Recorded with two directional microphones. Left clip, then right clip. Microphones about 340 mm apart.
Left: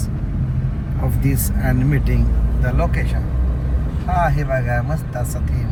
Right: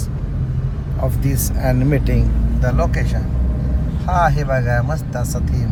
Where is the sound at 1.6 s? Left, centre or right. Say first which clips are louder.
Right 5 dB; right.